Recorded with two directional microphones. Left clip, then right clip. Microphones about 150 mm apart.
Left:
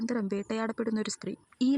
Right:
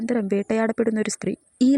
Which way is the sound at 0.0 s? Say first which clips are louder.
Right 9 dB; 35° right (ahead or behind).